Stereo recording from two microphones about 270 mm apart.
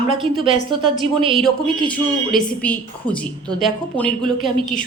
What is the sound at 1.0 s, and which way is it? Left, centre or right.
Speech, centre.